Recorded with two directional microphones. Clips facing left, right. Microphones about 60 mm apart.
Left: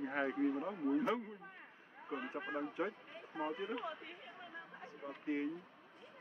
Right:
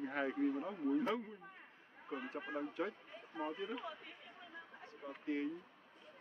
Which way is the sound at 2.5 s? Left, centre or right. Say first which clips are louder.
Left 1 dB; centre.